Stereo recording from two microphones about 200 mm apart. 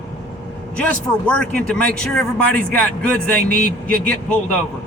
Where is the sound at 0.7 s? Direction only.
5° left (ahead or behind).